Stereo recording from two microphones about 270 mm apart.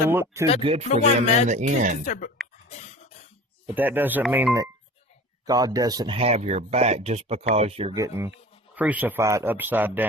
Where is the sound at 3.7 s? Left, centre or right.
Centre.